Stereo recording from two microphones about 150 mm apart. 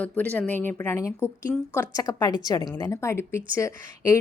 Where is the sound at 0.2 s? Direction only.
10° left (ahead or behind).